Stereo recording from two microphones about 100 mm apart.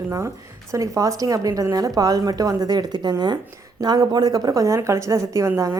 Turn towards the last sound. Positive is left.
turn(degrees=-30)  # may be behind; listen again after turning